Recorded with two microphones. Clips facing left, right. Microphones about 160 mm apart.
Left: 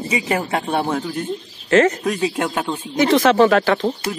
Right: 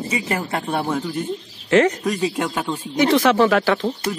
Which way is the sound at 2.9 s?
15° right (ahead or behind).